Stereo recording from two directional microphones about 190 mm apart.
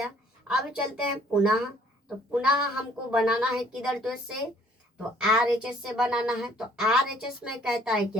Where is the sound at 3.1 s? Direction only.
5° right (ahead or behind).